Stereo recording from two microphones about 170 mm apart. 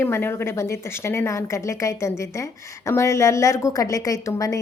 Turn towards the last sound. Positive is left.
turn(degrees=20)  # may be behind; listen again after turning